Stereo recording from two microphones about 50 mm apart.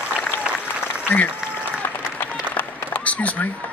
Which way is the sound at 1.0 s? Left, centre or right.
Left.